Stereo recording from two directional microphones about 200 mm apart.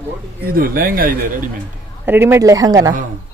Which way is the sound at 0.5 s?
45° right (ahead or behind).